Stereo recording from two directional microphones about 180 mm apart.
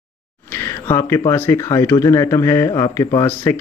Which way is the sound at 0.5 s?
15° left (ahead or behind).